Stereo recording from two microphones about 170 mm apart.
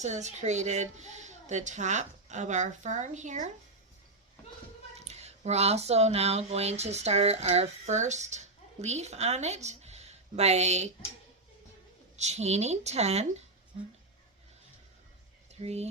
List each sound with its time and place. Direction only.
0.0 s a woman's voice: 45° right (ahead or behind)
4.9 s speech: 40° right (ahead or behind)
12.1 s speech: 40° right (ahead or behind)
15.6 s speech: 40° right (ahead or behind)